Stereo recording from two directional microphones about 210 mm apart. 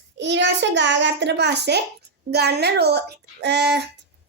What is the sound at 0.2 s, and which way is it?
A child's voice, 55° right (ahead or behind).